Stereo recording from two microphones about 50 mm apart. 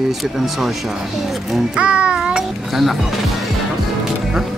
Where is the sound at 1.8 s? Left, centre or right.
Right.